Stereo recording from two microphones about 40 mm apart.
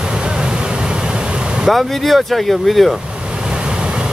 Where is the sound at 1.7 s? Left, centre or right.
Centre.